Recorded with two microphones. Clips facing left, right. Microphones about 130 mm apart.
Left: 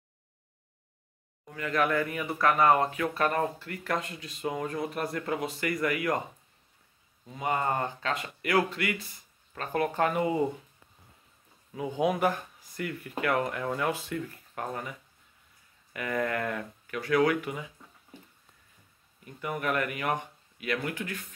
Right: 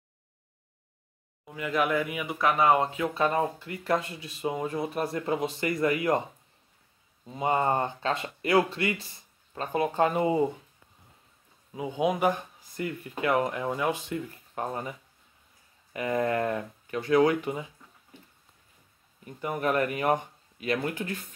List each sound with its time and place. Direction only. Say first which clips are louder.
1.4 s speech: right 1 dB; 15° right (ahead or behind)
7.2 s speech: right 4 dB; 25° right (ahead or behind)
11.7 s speech: right 1 dB; 15° right (ahead or behind)
19.2 s speech: right 3 dB; 30° right (ahead or behind)